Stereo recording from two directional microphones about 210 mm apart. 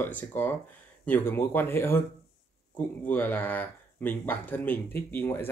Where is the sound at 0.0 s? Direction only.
10° left (ahead or behind).